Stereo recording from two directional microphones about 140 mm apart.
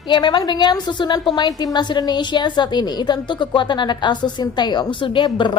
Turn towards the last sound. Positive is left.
turn(degrees=35)  # may be behind; listen again after turning